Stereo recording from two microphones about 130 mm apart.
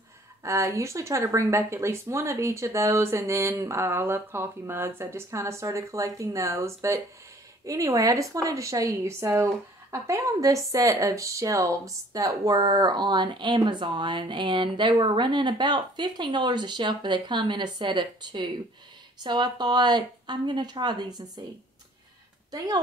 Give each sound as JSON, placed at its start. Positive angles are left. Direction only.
{"t": 0.4, "sound": "a woman's voice", "side_deg": -25}